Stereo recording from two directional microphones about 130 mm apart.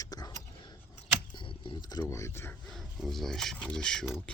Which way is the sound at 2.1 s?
20° left (ahead or behind).